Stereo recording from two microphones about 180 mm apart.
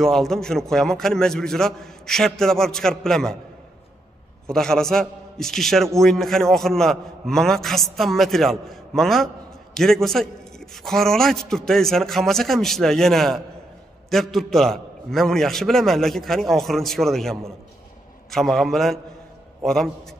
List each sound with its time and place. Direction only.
0.0 s a man's voice: centre (ahead or behind)
4.5 s a man's voice: 5° left (ahead or behind)